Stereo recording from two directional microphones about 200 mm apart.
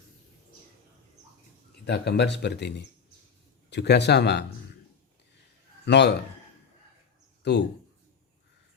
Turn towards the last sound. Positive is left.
turn(degrees=55)  # may be behind; listen again after turning